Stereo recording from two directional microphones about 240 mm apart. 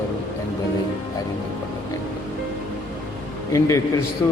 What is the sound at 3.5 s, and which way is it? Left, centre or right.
Speech, centre.